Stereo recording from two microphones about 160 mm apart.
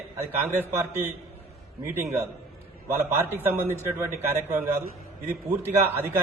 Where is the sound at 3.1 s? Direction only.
15° right (ahead or behind).